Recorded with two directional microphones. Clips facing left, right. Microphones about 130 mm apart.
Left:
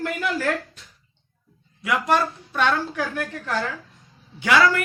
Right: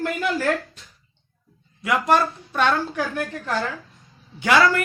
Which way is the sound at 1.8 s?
40° right (ahead or behind).